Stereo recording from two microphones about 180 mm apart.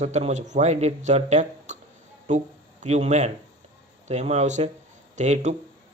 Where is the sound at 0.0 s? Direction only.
40° right (ahead or behind).